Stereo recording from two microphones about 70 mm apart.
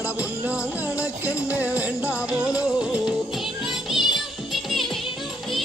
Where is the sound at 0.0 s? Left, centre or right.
Centre.